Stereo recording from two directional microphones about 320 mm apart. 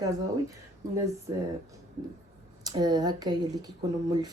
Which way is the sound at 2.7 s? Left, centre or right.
Centre.